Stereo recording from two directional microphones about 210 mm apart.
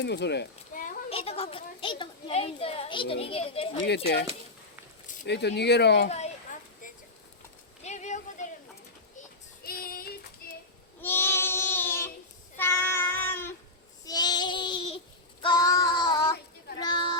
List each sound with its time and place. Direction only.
0.0 s speech: 55° left (ahead or behind)
1.1 s a child's voice: 25° left (ahead or behind)
3.8 s speech: 50° left (ahead or behind)
6.1 s speech: 30° left (ahead or behind)
7.9 s a sound: 35° left (ahead or behind)
9.6 s child singing: 45° left (ahead or behind)
10.4 s children playing: 45° left (ahead or behind)
11.0 s child singing: 10° left (ahead or behind)
12.5 s meow: 10° left (ahead or behind)
14.0 s child singing: 20° left (ahead or behind)
16.8 s a sound: 20° left (ahead or behind)